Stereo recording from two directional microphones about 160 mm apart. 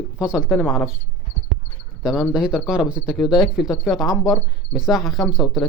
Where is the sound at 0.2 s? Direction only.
5° right (ahead or behind).